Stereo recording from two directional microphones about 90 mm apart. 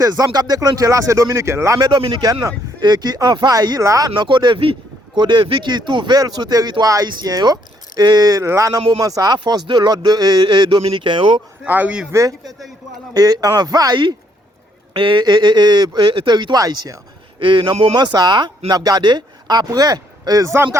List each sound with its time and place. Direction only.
0.0 s speech: 40° right (ahead or behind)
1.8 s speech: 55° right (ahead or behind); by 4.1 s 35° right (ahead or behind)
4.1 s speech: 60° right (ahead or behind); by 9.4 s 45° right (ahead or behind)
9.4 s speech: 60° right (ahead or behind)
11.6 s speech: 15° right (ahead or behind)
12.1 s speech: 35° right (ahead or behind)
14.9 s speech: 65° right (ahead or behind); by 17.0 s 45° right (ahead or behind)
17.4 s speech: 65° right (ahead or behind)
17.9 s speech: 50° right (ahead or behind); by 20.7 s 35° right (ahead or behind)